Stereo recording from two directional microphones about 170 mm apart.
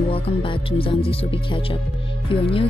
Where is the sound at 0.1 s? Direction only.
30° left (ahead or behind).